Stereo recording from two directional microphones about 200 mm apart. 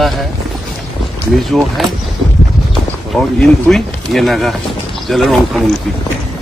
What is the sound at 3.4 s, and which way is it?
Speech, centre (ahead or behind).